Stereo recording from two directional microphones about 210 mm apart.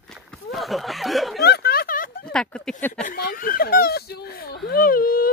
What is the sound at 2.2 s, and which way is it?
Speech, 5° left (ahead or behind).